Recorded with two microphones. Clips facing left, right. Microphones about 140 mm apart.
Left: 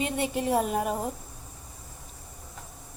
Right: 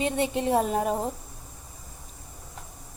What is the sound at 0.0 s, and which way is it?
Speech, 25° right (ahead or behind).